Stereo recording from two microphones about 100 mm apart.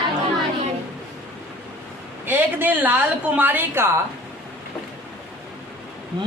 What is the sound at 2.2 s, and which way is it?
A woman's voice, 20° right (ahead or behind).